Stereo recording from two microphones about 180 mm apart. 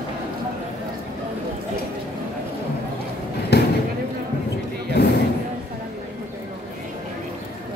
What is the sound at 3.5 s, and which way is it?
Basketball bounce, 65° left (ahead or behind).